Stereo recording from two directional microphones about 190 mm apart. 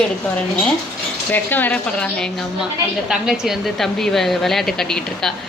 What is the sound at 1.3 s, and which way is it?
A woman's voice, 10° left (ahead or behind).